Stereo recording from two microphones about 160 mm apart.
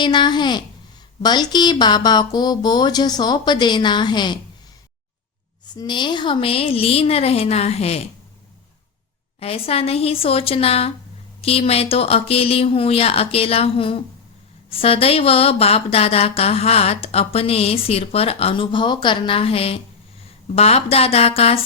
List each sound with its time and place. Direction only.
0.0 s speech: 30° left (ahead or behind)
5.6 s speech: 25° left (ahead or behind)
9.4 s speech: 40° left (ahead or behind)